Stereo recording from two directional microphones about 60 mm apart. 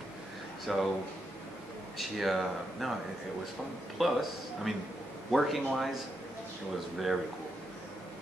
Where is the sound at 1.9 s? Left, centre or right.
Centre.